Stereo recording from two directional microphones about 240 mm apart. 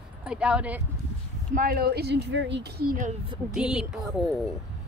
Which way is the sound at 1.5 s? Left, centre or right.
Right.